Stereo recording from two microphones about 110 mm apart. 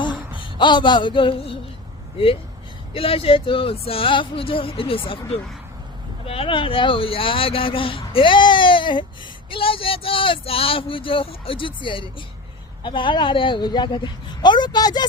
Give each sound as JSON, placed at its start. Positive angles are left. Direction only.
{"t": 0.6, "sound": "speech", "side_deg": 45}